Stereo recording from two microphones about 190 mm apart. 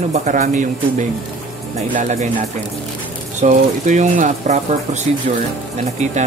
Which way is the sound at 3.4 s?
40° right (ahead or behind).